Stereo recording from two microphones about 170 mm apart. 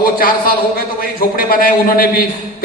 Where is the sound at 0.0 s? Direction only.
55° left (ahead or behind).